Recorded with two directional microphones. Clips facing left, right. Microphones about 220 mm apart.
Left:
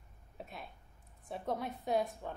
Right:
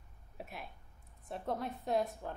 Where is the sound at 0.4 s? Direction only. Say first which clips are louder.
Right 1 dB; 5° right (ahead or behind).